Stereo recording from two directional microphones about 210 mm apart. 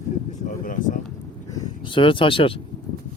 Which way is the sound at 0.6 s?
40° left (ahead or behind).